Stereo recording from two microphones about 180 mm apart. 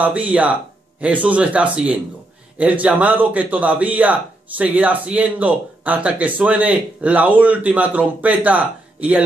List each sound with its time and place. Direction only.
0.0 s a man's voice: 10° right (ahead or behind)